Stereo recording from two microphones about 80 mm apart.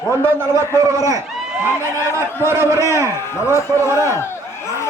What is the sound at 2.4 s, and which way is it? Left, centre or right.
Speech, right.